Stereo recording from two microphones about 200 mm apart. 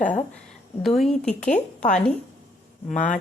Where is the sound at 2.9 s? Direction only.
40° left (ahead or behind).